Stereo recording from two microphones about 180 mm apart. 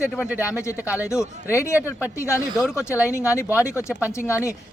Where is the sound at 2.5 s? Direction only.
Centre (ahead or behind).